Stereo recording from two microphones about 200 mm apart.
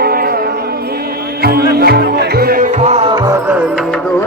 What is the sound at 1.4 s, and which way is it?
Music, 50° right (ahead or behind).